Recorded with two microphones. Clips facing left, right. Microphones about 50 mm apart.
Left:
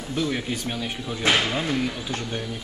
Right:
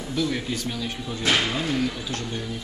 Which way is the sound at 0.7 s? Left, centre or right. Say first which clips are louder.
Left 1 dB; left.